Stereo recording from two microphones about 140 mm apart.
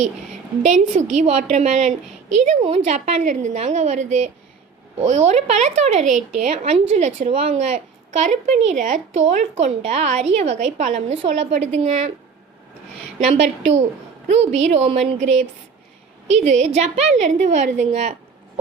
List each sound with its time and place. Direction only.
0.6 s a woman's voice: 60° right (ahead or behind)
13.1 s a woman's voice: 50° right (ahead or behind)
16.3 s a woman's voice: 60° right (ahead or behind)